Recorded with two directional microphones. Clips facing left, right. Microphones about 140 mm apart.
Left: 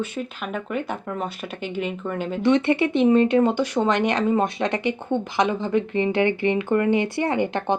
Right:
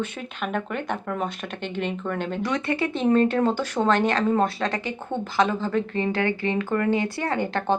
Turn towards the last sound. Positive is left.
turn(degrees=20)  # may be behind; listen again after turning